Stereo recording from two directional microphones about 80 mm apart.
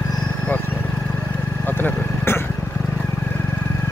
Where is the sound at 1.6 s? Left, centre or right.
Left.